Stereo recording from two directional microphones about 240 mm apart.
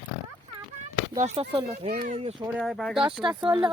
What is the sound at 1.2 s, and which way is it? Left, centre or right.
Speech, right.